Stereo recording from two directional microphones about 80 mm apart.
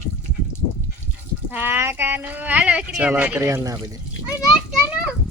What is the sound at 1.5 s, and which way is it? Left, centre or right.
Speech, right.